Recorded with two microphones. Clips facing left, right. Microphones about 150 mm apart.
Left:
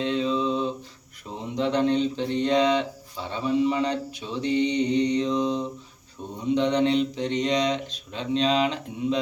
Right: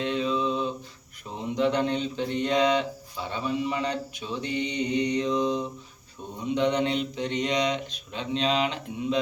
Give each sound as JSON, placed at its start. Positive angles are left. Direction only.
{"t": 0.0, "sound": "a capella", "side_deg": 30}
{"t": 1.5, "sound": "speech", "side_deg": 30}
{"t": 4.4, "sound": "mantra", "side_deg": 30}
{"t": 4.9, "sound": "speech", "side_deg": 30}